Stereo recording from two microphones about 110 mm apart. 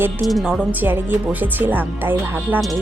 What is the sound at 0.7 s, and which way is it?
Speech, 15° right (ahead or behind).